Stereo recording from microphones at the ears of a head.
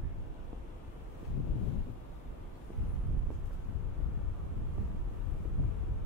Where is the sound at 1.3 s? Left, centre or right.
Left.